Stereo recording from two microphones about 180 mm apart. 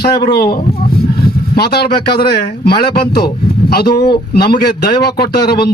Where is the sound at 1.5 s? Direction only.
60° left (ahead or behind).